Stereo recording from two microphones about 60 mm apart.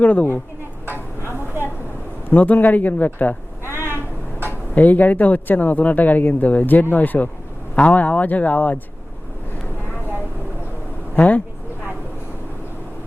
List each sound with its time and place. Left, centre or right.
0.0 s speech: left
2.3 s speech: left
4.7 s speech: left
11.1 s speech: left